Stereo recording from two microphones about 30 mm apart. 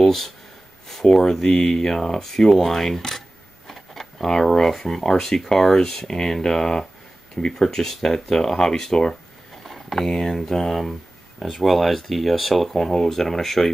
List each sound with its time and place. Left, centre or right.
0.0 s a sound: centre
0.8 s speech: centre
2.2 s speech: centre
9.7 s speech: centre